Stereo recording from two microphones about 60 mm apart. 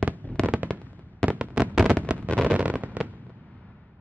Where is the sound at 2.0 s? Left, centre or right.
Right.